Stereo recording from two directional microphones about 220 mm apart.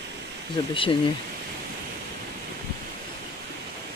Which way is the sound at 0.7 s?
25° left (ahead or behind).